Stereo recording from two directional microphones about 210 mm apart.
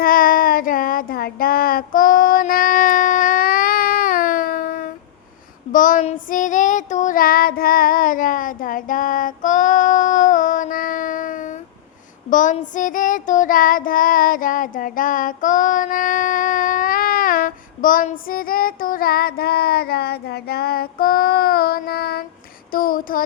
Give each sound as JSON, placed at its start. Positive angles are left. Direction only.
{"t": 0.0, "sound": "child singing", "side_deg": 45}
{"t": 22.7, "sound": "speech", "side_deg": 45}